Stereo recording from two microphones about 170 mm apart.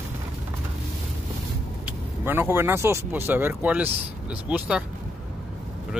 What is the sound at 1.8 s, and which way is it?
Speech, 15° right (ahead or behind).